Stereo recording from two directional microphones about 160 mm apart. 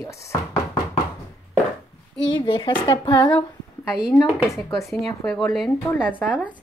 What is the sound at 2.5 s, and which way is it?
Speech, 30° left (ahead or behind).